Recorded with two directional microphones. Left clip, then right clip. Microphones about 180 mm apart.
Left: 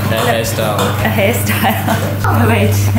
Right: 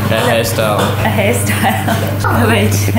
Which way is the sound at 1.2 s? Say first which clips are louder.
Left 1 dB; 20° left (ahead or behind).